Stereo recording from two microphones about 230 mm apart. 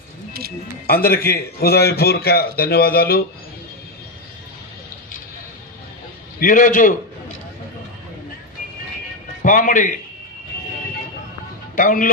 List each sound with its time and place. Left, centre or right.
0.9 s a man's voice: left
6.4 s a man's voice: left
9.4 s a man's voice: left
11.8 s a man's voice: left